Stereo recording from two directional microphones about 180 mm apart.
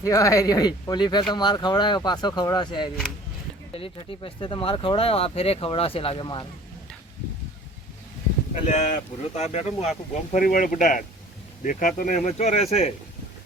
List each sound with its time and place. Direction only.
0.0 s speech: 15° left (ahead or behind)
8.6 s speech: 40° left (ahead or behind)